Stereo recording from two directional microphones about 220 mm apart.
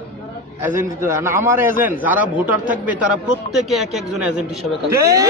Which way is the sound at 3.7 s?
Centre (ahead or behind).